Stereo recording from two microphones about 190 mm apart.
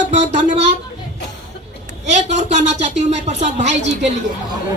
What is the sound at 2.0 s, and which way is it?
A child's voice, 35° right (ahead or behind).